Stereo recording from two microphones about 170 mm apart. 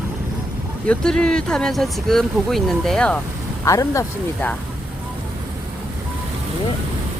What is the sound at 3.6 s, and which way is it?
Speech, 20° left (ahead or behind).